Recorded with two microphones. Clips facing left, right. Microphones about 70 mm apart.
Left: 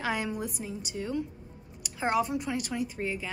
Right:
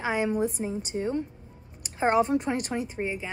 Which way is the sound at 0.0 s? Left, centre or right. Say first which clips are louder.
Right 5 dB; right.